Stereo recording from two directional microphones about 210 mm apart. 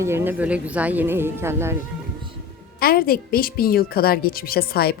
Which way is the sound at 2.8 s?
45° left (ahead or behind).